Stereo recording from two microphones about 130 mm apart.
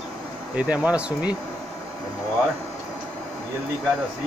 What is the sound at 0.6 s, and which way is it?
Speech, 10° right (ahead or behind).